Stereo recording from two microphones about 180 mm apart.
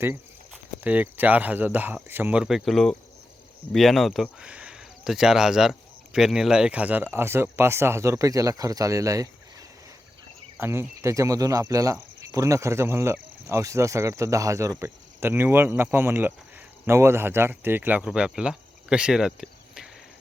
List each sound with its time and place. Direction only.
0.5 s speech: 10° right (ahead or behind)
10.6 s speech: 15° right (ahead or behind)